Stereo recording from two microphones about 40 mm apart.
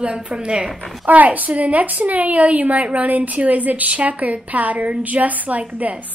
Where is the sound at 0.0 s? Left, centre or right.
Right.